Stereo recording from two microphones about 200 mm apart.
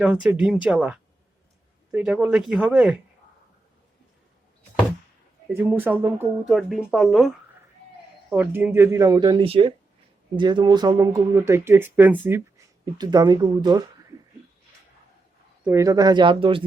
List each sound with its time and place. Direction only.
0.0 s speech: 5° right (ahead or behind)
5.5 s speech: 10° right (ahead or behind)
8.3 s speech: 10° right (ahead or behind)
12.8 s speech: 20° right (ahead or behind)
15.6 s speech: 15° right (ahead or behind)